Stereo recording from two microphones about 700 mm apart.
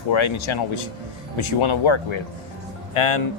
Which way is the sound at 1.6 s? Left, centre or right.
Left.